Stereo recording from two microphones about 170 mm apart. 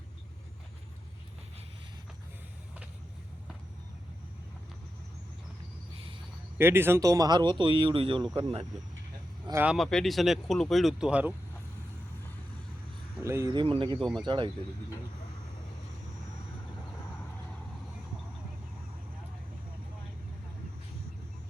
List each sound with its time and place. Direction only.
6.6 s speech: 15° right (ahead or behind); by 8.6 s 30° right (ahead or behind)
9.6 s speech: centre (ahead or behind)
13.2 s speech: 20° right (ahead or behind)
14.0 s speech: centre (ahead or behind)
14.3 s speech: 30° right (ahead or behind)